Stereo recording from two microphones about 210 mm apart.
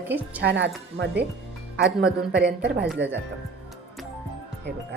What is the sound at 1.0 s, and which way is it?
Speech, 55° right (ahead or behind).